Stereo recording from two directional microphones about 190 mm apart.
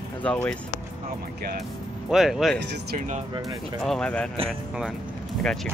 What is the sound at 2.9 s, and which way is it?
Speech, 40° right (ahead or behind).